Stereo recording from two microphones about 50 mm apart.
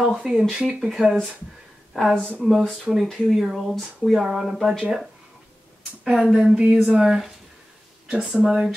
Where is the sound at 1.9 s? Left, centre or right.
Centre.